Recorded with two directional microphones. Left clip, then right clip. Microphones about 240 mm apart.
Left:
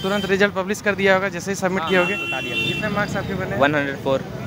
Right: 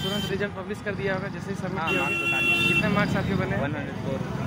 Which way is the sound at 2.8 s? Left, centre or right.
Centre.